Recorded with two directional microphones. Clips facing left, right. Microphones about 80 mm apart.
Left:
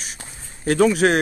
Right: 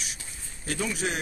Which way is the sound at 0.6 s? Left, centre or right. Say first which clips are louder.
Left 14 dB; left.